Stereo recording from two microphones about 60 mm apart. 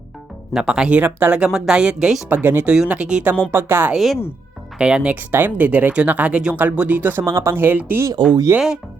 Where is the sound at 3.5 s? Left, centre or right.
Right.